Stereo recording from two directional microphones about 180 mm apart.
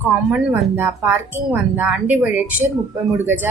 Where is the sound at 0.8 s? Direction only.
10° right (ahead or behind).